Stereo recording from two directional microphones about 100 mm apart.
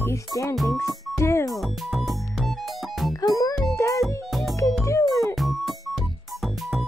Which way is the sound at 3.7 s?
30° left (ahead or behind).